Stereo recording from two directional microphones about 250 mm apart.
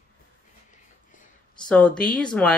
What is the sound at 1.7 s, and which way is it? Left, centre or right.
Speech, centre.